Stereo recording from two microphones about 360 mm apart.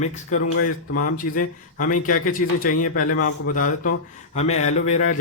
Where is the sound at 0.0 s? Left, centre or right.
Centre.